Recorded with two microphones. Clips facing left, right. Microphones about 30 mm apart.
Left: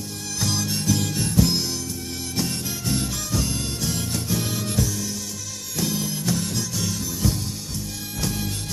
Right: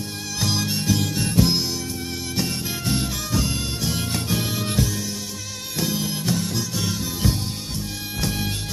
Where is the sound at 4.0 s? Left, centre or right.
Right.